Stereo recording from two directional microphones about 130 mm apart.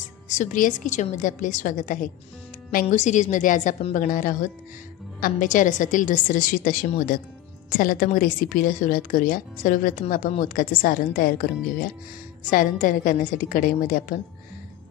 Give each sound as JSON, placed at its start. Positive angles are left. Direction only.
{"t": 0.3, "sound": "a woman's voice", "side_deg": 80}
{"t": 2.7, "sound": "a woman's voice", "side_deg": 70}
{"t": 12.4, "sound": "a woman's voice", "side_deg": 90}